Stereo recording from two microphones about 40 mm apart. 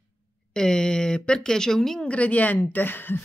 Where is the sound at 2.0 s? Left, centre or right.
Left.